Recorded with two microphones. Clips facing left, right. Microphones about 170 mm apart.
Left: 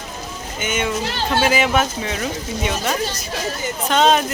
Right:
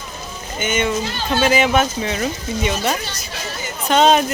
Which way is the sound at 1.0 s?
70° left (ahead or behind).